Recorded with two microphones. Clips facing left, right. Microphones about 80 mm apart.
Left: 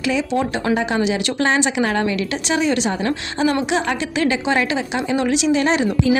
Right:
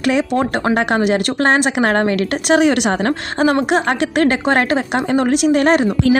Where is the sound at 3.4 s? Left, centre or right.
Right.